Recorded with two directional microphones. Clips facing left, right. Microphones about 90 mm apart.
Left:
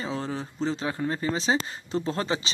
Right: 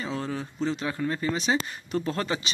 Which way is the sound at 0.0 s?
30° left (ahead or behind).